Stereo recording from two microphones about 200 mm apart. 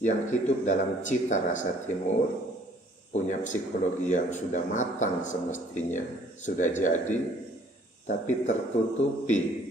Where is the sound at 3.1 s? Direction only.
40° left (ahead or behind).